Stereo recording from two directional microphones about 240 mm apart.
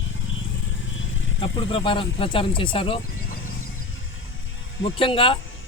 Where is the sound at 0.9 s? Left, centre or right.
Left.